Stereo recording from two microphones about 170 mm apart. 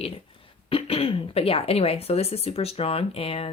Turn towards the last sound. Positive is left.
turn(degrees=35)  # may be behind; listen again after turning